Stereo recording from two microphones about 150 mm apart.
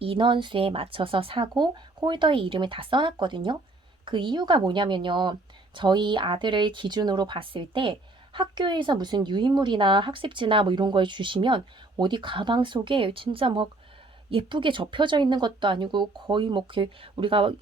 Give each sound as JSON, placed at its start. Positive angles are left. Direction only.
{"t": 0.0, "sound": "a woman's voice", "side_deg": -35}